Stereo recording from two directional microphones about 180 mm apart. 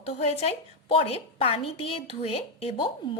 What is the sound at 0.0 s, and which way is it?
A woman's voice, 35° left (ahead or behind).